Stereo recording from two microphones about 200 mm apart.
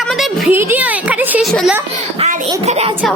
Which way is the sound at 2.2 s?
35° right (ahead or behind).